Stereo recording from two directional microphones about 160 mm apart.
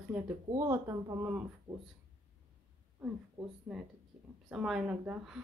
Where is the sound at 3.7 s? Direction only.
5° right (ahead or behind).